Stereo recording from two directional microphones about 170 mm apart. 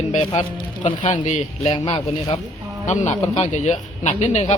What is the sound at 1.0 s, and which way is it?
Speech, 45° left (ahead or behind).